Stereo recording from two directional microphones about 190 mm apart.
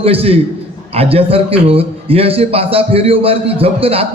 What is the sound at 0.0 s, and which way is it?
A man's voice, 30° right (ahead or behind).